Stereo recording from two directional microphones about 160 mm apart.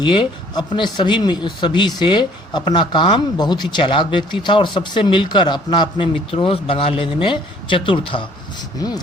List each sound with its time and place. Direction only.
0.0 s speech: 30° left (ahead or behind)